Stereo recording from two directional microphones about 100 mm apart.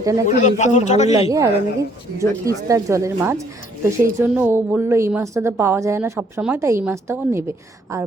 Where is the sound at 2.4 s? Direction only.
35° right (ahead or behind).